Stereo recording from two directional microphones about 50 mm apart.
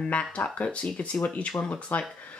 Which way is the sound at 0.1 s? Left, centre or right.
Left.